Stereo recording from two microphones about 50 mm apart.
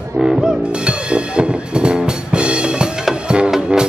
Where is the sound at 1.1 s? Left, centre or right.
Right.